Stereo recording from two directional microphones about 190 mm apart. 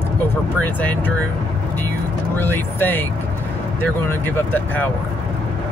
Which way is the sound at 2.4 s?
10° left (ahead or behind).